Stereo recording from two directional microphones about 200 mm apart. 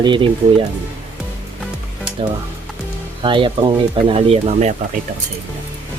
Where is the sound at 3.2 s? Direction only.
25° right (ahead or behind).